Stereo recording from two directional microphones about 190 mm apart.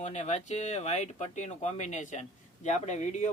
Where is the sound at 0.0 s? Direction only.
40° left (ahead or behind).